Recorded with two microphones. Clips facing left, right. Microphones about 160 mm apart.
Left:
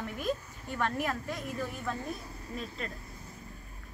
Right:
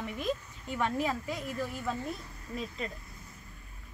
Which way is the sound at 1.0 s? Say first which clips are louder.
Right 1 dB; 10° right (ahead or behind).